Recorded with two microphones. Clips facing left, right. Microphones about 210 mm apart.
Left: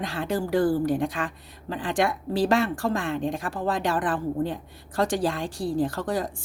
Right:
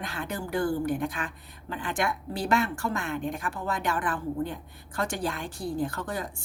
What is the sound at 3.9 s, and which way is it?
Speech, 35° left (ahead or behind).